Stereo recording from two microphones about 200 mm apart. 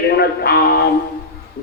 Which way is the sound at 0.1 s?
50° left (ahead or behind).